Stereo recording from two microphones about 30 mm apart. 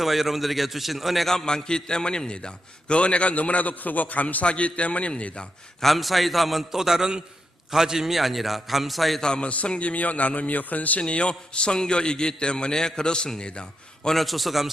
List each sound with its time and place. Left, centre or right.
0.0 s a man's voice: centre
1.2 s a man's voice: centre
1.5 s a man's voice: left
3.3 s a man's voice: left
4.4 s a man's voice: left
5.8 s a man's voice: centre
6.7 s a man's voice: centre
9.4 s a man's voice: left
11.0 s a man's voice: left
14.1 s a man's voice: centre